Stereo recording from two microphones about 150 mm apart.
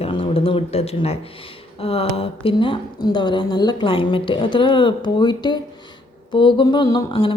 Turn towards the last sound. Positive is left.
turn(degrees=35)  # may be behind; listen again after turning